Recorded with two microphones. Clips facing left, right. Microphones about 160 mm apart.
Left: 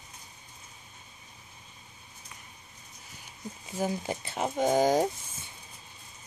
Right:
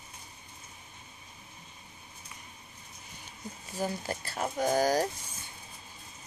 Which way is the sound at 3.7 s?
15° left (ahead or behind).